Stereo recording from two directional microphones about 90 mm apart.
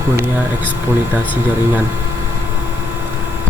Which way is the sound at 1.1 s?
20° right (ahead or behind).